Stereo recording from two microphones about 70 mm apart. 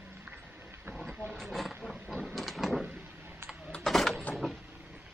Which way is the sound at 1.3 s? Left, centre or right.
Centre.